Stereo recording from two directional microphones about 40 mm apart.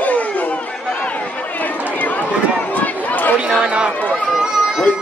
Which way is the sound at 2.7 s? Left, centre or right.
Left.